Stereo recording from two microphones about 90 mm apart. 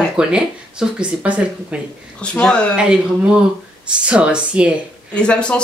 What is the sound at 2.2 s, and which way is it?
Speech, 10° left (ahead or behind).